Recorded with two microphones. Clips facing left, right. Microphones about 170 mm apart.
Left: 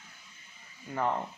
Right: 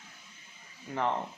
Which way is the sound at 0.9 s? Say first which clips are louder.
Even; 5° left (ahead or behind).